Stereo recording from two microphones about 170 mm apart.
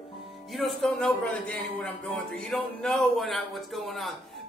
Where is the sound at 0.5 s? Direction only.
Centre (ahead or behind).